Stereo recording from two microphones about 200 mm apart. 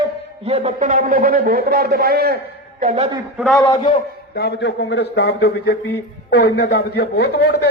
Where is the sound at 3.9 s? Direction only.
55° left (ahead or behind).